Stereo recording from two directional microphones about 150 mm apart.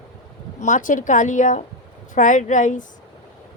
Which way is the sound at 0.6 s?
60° left (ahead or behind).